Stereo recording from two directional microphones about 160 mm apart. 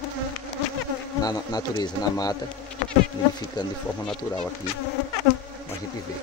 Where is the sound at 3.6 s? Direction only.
25° left (ahead or behind).